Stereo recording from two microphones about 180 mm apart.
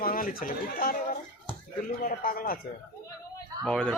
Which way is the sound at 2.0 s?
50° left (ahead or behind).